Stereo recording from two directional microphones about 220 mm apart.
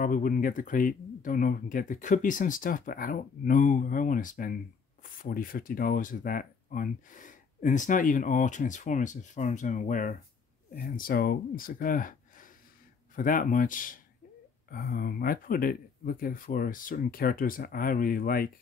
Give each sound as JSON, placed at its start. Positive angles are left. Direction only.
{"t": 0.0, "sound": "speech", "side_deg": 40}